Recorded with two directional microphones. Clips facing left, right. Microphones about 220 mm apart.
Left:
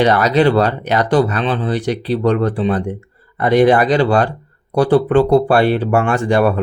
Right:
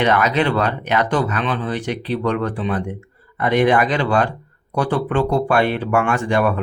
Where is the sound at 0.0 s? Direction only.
35° left (ahead or behind).